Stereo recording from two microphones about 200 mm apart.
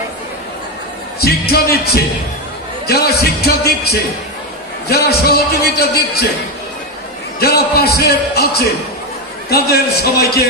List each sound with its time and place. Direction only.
1.2 s a man's voice: 50° left (ahead or behind)
7.3 s a man's voice: 50° left (ahead or behind)